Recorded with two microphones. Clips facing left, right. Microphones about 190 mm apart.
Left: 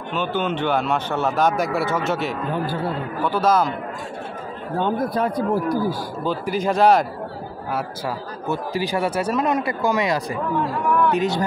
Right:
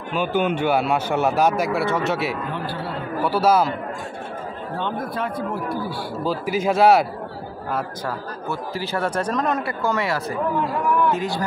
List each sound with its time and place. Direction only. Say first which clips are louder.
0.1 s a man's voice: right 2 dB; 10° right (ahead or behind)
2.5 s speech: left 4 dB; 45° left (ahead or behind)
3.3 s a man's voice: right 1 dB; 10° right (ahead or behind)
4.7 s speech: left 6 dB; 40° left (ahead or behind)
6.2 s a man's voice: even; 5° right (ahead or behind)
8.5 s speech: left 4 dB; 15° left (ahead or behind)